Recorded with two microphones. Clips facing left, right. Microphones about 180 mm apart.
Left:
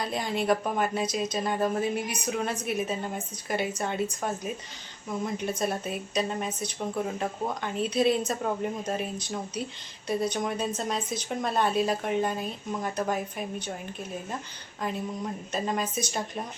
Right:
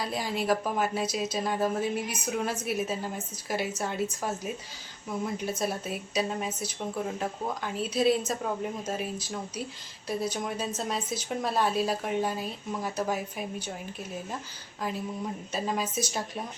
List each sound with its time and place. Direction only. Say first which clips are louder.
0.0 s speech: left 2 dB; 5° right (ahead or behind)
14.8 s speech: left 1 dB; 5° right (ahead or behind)